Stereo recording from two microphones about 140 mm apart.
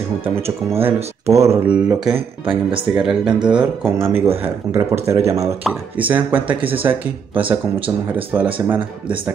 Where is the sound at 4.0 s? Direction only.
45° right (ahead or behind).